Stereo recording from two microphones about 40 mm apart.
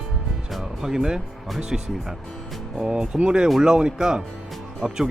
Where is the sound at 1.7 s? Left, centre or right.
Centre.